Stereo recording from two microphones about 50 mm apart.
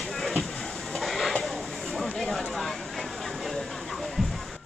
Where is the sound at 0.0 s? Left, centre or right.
Centre.